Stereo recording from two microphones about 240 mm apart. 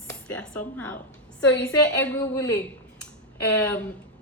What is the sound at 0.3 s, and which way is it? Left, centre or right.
A woman's voice, centre.